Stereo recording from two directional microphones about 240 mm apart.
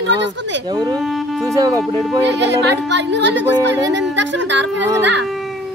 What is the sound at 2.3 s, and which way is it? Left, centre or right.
Speech, right.